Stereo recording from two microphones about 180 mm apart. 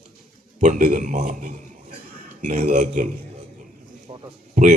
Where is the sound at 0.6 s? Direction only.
45° right (ahead or behind).